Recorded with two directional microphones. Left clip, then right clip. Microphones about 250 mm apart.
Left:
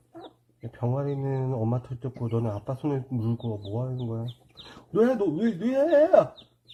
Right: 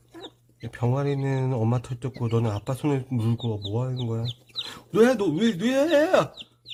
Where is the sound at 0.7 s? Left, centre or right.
Right.